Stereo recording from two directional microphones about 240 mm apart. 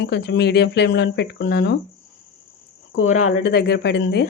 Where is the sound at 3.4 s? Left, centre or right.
Left.